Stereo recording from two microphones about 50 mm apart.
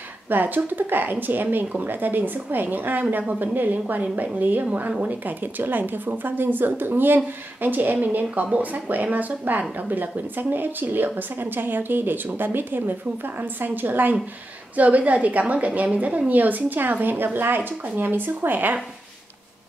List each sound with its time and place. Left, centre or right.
0.3 s a woman's voice: right
17.6 s speech: right